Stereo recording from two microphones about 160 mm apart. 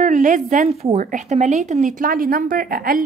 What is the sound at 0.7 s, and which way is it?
A woman's voice, 40° right (ahead or behind).